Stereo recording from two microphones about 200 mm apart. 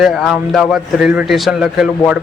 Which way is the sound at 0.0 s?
Centre (ahead or behind).